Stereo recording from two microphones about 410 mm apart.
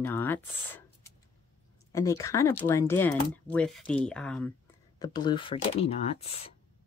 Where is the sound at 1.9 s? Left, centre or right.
Centre.